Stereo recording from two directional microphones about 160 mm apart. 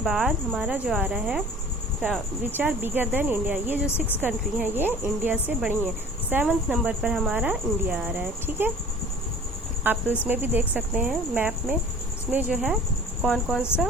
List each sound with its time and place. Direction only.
0.0 s speech: centre (ahead or behind)
3.8 s speech: 10° left (ahead or behind)
4.2 s speech: 10° right (ahead or behind)
9.8 s speech: 10° right (ahead or behind)